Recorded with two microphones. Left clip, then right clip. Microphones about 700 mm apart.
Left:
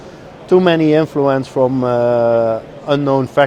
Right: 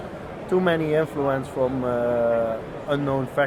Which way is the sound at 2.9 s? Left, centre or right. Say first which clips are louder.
Left 10 dB; left.